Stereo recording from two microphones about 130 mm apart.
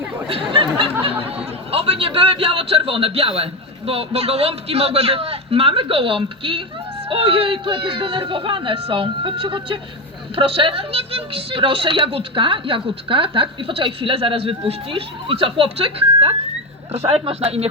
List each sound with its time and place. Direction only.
0.3 s chatter: 45° right (ahead or behind)
1.0 s speech: 45° right (ahead or behind)